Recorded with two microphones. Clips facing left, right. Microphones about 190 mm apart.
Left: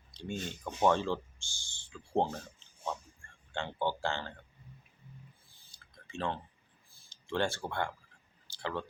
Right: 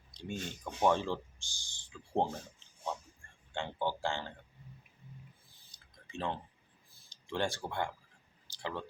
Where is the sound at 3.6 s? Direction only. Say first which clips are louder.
Left 1 dB; 15° right (ahead or behind).